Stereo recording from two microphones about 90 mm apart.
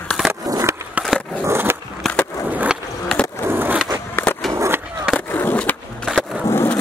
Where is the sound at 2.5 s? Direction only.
15° right (ahead or behind).